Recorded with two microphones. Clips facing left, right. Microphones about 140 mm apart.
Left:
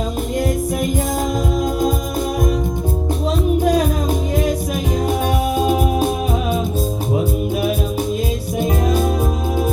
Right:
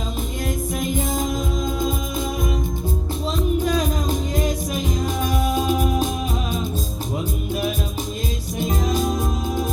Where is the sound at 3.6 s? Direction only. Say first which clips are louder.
Left 5 dB; 65° left (ahead or behind).